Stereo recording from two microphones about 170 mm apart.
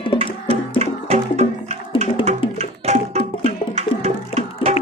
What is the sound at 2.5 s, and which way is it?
Tabla, 40° right (ahead or behind).